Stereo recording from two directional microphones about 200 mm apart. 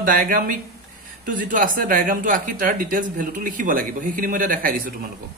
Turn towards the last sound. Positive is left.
turn(degrees=-45)  # may be behind; listen again after turning